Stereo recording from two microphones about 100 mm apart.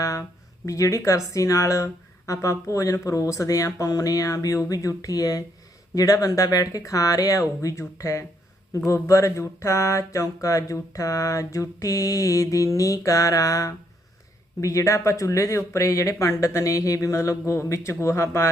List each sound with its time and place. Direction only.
0.0 s speech: 35° left (ahead or behind)